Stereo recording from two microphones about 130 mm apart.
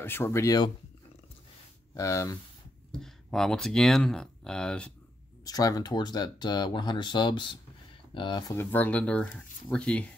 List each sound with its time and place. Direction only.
0.0 s speech: 15° left (ahead or behind)
2.0 s speech: 25° left (ahead or behind)
2.9 s speech: 5° left (ahead or behind)
5.4 s speech: 30° left (ahead or behind)
8.5 s speech: 15° left (ahead or behind)